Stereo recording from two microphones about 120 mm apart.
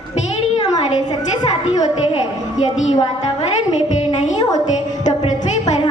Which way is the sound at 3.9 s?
85° left.